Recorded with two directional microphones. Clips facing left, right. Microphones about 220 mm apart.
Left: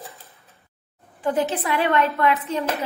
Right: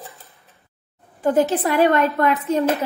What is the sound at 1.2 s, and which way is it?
A woman's voice, 45° right (ahead or behind).